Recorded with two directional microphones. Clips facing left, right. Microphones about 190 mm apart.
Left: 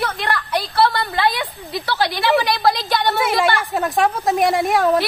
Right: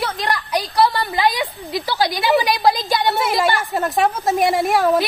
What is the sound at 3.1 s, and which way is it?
A woman's voice, centre (ahead or behind).